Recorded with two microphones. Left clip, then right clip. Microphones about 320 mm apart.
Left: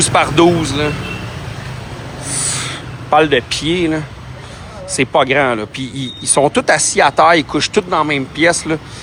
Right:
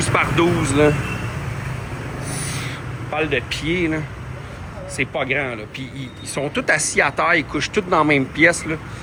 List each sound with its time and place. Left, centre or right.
0.0 s speech: centre
2.3 s a sound: left
3.5 s speech: centre